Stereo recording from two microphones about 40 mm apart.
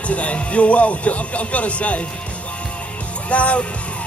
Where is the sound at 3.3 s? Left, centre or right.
Left.